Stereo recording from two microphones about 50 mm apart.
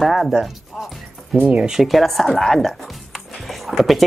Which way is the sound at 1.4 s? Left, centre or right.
Right.